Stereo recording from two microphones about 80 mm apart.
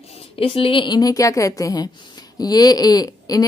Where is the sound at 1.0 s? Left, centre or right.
Left.